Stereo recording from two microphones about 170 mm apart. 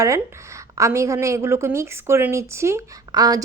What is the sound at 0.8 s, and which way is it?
A woman's voice, 15° right (ahead or behind).